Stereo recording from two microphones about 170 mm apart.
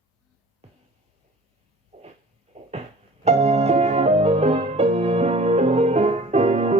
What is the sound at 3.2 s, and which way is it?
Music, 40° right (ahead or behind).